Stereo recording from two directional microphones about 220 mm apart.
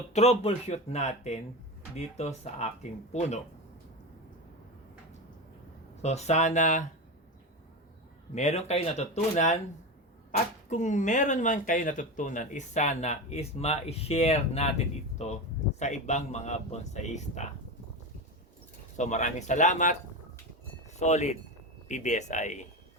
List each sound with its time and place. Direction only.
0.1 s speech: 30° left (ahead or behind)
6.0 s speech: 30° left (ahead or behind)
8.4 s speech: 30° left (ahead or behind)
15.8 s speech: 30° left (ahead or behind)
18.9 s speech: 35° left (ahead or behind)